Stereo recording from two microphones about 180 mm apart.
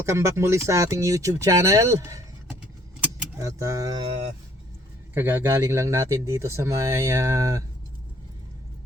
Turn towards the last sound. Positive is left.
turn(degrees=-15)  # may be behind; listen again after turning